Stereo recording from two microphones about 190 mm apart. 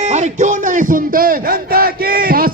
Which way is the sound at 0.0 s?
35° right (ahead or behind).